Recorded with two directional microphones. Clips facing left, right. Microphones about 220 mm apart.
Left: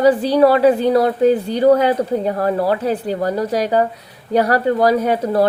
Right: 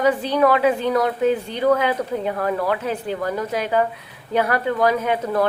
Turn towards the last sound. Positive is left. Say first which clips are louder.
# left 5 dB
turn(degrees=35)  # may be behind; listen again after turning